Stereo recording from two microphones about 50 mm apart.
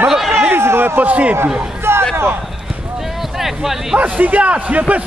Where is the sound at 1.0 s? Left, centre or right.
Right.